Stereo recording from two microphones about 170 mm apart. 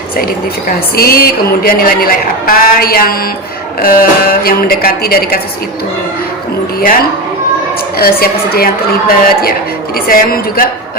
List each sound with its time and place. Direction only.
0.7 s a woman's voice: 60° left (ahead or behind)
7.9 s a woman's voice: 65° left (ahead or behind)